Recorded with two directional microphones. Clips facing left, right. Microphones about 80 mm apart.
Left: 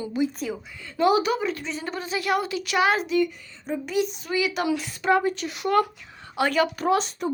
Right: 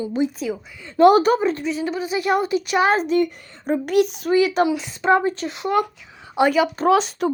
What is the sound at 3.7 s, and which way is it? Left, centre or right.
Speech, right.